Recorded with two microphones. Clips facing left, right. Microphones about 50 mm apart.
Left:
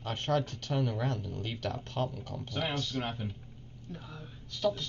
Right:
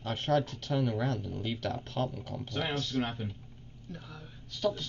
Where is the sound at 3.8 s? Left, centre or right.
Centre.